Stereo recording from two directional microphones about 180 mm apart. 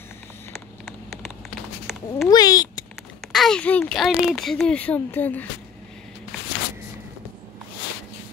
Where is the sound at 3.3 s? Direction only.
5° left (ahead or behind).